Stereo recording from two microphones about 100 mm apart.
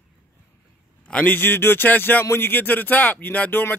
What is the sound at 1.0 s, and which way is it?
A man's voice, 15° left (ahead or behind).